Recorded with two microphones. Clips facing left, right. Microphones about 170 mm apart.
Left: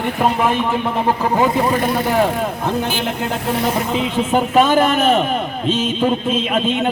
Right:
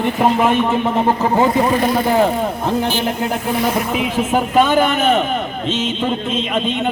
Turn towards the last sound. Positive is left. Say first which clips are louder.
# left 1 dB
turn(degrees=5)  # may be behind; listen again after turning